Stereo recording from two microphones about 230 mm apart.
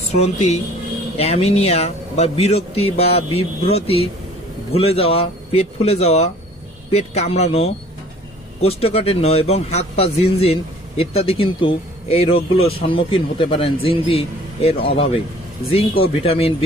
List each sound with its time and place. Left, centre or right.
0.1 s a man's voice: left